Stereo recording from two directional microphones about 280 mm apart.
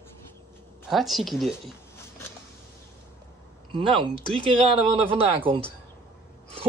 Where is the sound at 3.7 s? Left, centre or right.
Centre.